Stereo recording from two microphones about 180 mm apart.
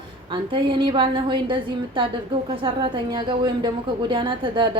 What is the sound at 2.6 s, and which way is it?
A woman's voice, 30° right (ahead or behind).